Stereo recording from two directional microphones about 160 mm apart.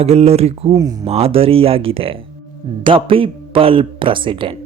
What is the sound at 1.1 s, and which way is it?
Speech, 35° right (ahead or behind).